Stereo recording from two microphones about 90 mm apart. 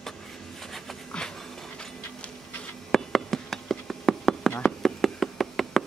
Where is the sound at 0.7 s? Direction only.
5° left (ahead or behind).